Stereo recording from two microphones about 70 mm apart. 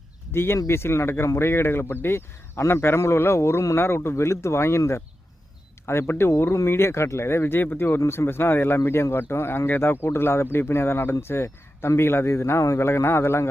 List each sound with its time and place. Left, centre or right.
0.3 s speech: left